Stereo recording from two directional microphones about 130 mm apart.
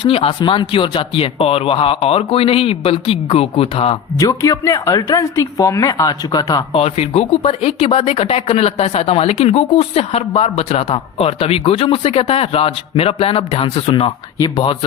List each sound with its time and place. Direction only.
0.0 s speech: 45° left (ahead or behind)
4.2 s a woman's voice: 25° left (ahead or behind)
6.7 s speech: 55° left (ahead or behind)
14.3 s speech: 35° left (ahead or behind)